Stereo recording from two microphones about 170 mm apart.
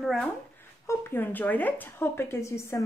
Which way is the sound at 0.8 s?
10° left (ahead or behind).